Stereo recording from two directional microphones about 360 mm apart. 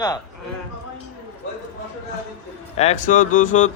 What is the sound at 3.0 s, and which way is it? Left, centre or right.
Speech, left.